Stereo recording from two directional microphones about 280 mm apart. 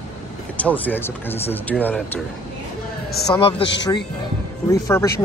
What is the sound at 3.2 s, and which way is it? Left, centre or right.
Speech, centre.